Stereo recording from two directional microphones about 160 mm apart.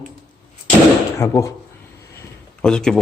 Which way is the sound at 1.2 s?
20° left (ahead or behind).